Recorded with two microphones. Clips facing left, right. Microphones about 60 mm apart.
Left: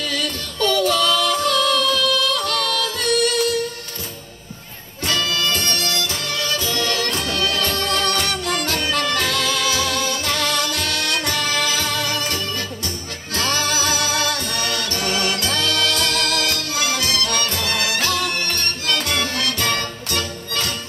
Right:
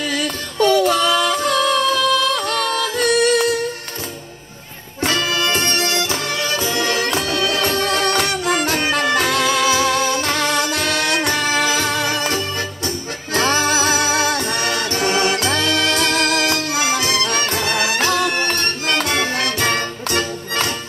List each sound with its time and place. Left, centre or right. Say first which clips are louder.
0.0 s music: right 3 dB; right
5.0 s music: right 3 dB; right